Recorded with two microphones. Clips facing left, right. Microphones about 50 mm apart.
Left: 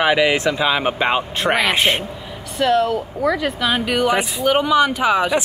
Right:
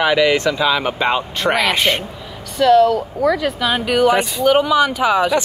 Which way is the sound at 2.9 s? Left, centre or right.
Centre.